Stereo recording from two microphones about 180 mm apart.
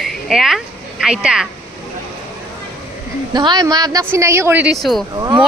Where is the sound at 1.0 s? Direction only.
5° right (ahead or behind).